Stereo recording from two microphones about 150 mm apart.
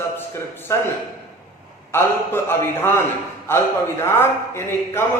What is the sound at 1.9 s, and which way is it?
Speech, 15° left (ahead or behind).